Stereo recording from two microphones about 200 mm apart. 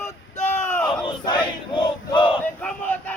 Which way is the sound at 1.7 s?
25° left (ahead or behind).